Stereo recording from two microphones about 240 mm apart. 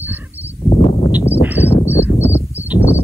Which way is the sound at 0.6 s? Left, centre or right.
Left.